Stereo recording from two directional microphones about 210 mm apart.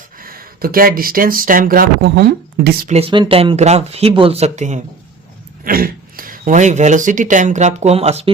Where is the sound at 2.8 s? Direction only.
30° right (ahead or behind).